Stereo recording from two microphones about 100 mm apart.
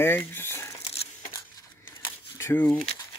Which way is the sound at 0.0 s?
20° left (ahead or behind).